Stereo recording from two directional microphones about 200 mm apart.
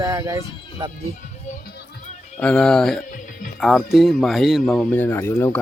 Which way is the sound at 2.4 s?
5° left (ahead or behind).